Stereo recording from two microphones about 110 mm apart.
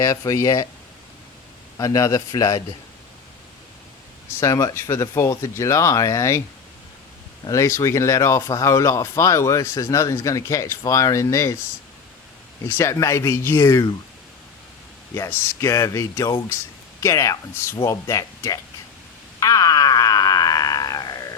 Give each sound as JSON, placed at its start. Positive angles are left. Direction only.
{"t": 0.0, "sound": "a man's voice", "side_deg": 30}
{"t": 1.8, "sound": "a man's voice", "side_deg": 30}
{"t": 4.4, "sound": "speech", "side_deg": 30}
{"t": 7.4, "sound": "speech", "side_deg": 30}
{"t": 12.6, "sound": "speech", "side_deg": 25}
{"t": 15.1, "sound": "speech", "side_deg": 25}
{"t": 19.4, "sound": "a sound", "side_deg": 30}